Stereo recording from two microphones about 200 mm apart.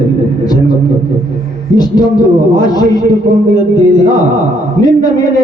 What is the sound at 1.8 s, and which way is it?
A man's voice, 20° left (ahead or behind).